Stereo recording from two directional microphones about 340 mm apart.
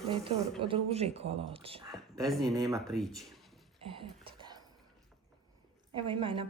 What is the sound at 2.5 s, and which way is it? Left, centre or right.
Speech, centre.